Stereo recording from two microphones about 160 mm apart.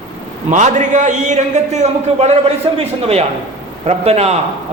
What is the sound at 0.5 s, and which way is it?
A man's voice, 50° right (ahead or behind).